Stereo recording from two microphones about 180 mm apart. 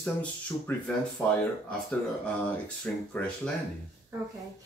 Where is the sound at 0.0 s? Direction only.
10° left (ahead or behind).